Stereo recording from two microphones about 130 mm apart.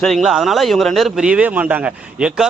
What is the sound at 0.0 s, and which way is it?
Speech, centre (ahead or behind).